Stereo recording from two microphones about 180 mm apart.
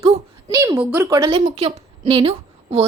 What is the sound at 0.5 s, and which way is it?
Speech, 15° right (ahead or behind).